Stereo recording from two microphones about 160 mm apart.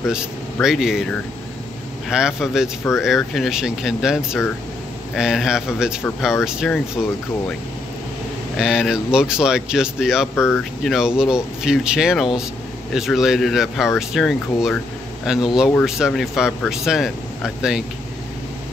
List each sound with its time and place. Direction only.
0.1 s speech: 5° right (ahead or behind)
2.0 s speech: 5° right (ahead or behind)
7.0 s speech: 5° left (ahead or behind)
8.5 s speech: 5° right (ahead or behind)
10.3 s speech: 15° left (ahead or behind)
10.6 s speech: centre (ahead or behind)